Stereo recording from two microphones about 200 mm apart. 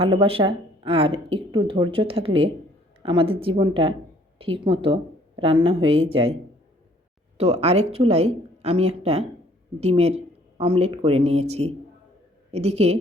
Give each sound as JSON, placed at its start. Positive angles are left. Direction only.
{"t": 0.0, "sound": "speech", "side_deg": -25}
{"t": 7.3, "sound": "speech", "side_deg": -30}